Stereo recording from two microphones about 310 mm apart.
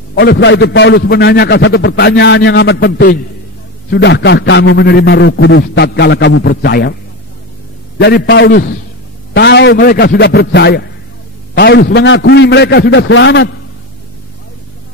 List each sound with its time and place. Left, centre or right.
0.1 s a man's voice: left
8.0 s a man's voice: left